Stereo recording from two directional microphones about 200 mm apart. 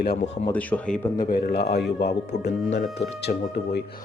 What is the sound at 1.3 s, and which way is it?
Speech, 55° left (ahead or behind).